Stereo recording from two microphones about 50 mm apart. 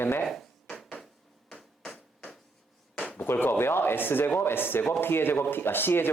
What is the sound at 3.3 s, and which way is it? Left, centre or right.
Speech, left.